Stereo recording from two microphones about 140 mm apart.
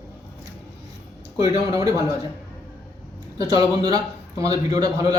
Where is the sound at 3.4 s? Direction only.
25° right (ahead or behind).